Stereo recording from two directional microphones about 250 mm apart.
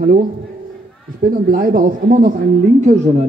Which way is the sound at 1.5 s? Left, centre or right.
Right.